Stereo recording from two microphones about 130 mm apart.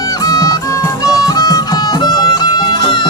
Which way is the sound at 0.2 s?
25° left (ahead or behind).